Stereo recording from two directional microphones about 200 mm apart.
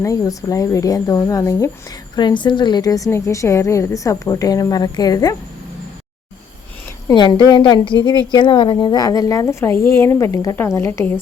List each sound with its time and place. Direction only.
0.0 s a woman's voice: 15° left (ahead or behind)
7.1 s a woman's voice: 20° left (ahead or behind)